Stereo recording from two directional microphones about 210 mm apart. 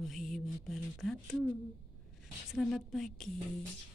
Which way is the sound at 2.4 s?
Centre (ahead or behind).